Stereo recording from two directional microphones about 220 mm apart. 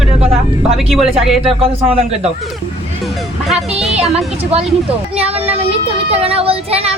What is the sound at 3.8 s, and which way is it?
Speech, centre (ahead or behind).